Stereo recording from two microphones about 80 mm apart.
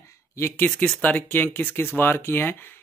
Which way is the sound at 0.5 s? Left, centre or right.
Centre.